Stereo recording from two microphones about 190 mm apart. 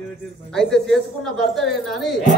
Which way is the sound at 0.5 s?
Centre (ahead or behind).